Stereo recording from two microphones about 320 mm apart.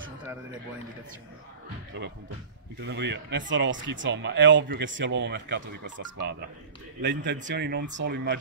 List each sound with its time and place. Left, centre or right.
2.8 s speech: right